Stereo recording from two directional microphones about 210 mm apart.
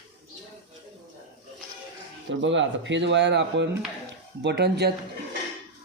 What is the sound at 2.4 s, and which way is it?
Speech, 60° right (ahead or behind).